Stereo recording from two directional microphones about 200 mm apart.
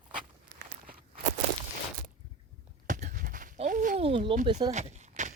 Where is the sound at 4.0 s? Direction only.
25° right (ahead or behind).